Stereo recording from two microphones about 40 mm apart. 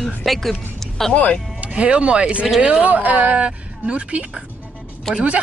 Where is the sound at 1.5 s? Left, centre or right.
Right.